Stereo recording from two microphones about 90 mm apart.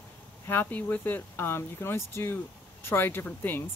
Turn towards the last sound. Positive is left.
turn(degrees=20)  # may be behind; listen again after turning